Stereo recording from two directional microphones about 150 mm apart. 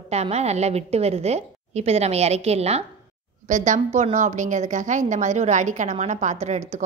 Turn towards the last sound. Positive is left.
turn(degrees=-50)  # may be behind; listen again after turning